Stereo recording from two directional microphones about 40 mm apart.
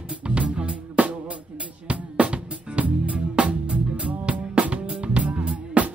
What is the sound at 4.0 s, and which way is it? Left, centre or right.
Music, right.